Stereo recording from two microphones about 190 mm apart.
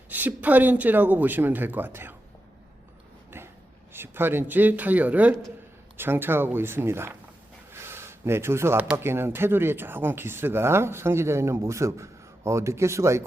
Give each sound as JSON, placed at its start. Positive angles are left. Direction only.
{"t": 0.1, "sound": "speech", "side_deg": -10}
{"t": 3.3, "sound": "a sound", "side_deg": -10}
{"t": 3.9, "sound": "speech", "side_deg": -10}